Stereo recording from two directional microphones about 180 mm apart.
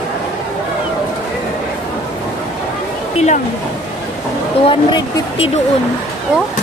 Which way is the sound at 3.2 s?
40° left (ahead or behind).